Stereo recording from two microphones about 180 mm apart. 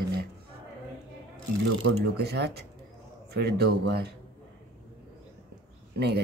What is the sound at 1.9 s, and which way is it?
Speech, 65° right (ahead or behind).